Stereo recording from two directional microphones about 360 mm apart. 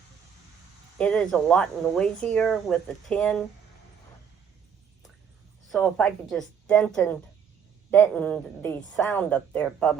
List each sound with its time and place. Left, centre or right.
0.9 s speech: centre
5.6 s speech: centre